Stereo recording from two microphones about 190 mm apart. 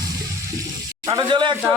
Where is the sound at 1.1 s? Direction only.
25° right (ahead or behind).